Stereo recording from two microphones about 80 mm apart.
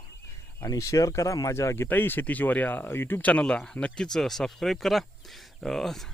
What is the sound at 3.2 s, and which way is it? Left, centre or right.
Speech, centre.